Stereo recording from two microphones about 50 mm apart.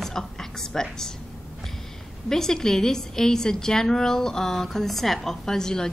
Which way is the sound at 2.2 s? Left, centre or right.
Centre.